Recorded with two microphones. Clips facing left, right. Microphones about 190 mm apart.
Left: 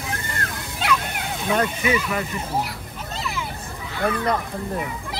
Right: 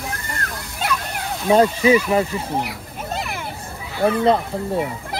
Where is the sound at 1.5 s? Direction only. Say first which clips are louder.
Right 8 dB; 30° right (ahead or behind).